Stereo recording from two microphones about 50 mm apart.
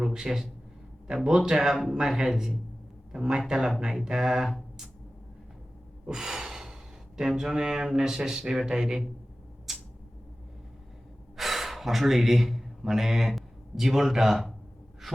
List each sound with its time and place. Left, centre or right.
0.0 s a man's voice: centre
6.1 s gasp: centre
7.2 s speech: centre
9.7 s a sound: centre
11.3 s speech: centre
15.0 s gasp: centre